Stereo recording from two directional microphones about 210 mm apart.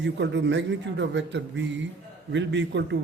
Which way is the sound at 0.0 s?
60° right (ahead or behind).